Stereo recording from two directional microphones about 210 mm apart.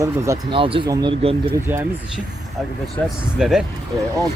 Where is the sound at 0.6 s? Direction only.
25° right (ahead or behind).